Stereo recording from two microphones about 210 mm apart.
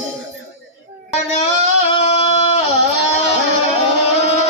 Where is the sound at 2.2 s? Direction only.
30° left (ahead or behind).